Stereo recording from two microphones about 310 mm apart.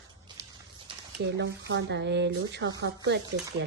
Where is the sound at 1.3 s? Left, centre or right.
Right.